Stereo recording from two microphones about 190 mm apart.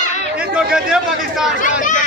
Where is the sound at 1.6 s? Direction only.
45° left (ahead or behind).